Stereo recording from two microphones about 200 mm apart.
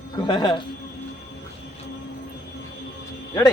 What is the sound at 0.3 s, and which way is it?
Speech, 20° left (ahead or behind).